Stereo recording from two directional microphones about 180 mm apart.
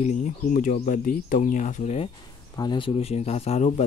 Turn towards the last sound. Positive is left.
turn(degrees=40)  # may be behind; listen again after turning